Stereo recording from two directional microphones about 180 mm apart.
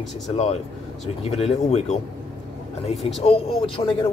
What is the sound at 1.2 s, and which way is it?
Speech, 35° left (ahead or behind).